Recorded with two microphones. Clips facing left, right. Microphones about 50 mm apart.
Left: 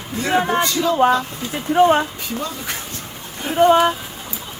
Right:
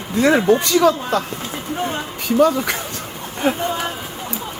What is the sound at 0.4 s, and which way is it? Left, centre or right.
Speech, left.